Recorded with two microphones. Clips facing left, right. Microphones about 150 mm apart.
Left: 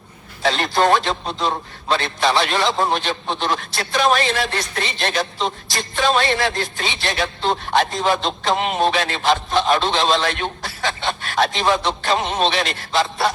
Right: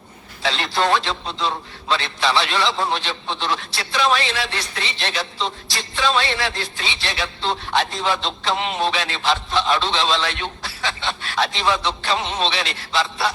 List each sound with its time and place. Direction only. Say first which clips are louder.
0.4 s a man's voice: left 4 dB; 45° left (ahead or behind)